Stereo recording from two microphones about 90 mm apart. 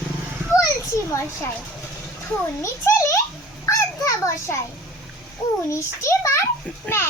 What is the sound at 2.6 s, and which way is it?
Speech, 30° left (ahead or behind).